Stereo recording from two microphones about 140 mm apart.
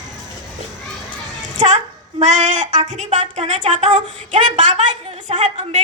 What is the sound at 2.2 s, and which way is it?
Speech, 60° right (ahead or behind).